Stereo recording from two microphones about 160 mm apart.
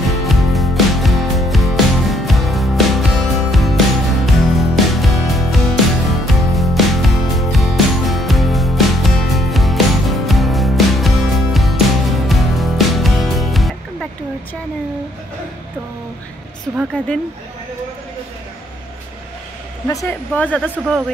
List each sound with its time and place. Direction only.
0.1 s music: centre (ahead or behind)
16.7 s a sound: centre (ahead or behind)
19.9 s hair dryer: 20° left (ahead or behind)
20.3 s speech: 10° left (ahead or behind)